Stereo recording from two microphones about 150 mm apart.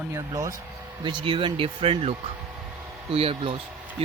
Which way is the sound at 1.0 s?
30° right (ahead or behind).